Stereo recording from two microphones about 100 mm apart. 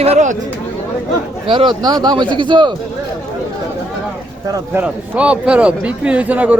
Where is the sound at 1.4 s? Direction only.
55° right (ahead or behind).